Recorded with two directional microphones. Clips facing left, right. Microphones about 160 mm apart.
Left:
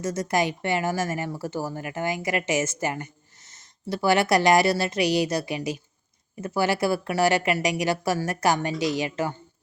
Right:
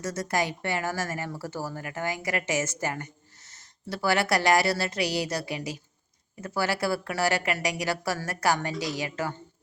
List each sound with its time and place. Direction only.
0.0 s speech: 20° left (ahead or behind)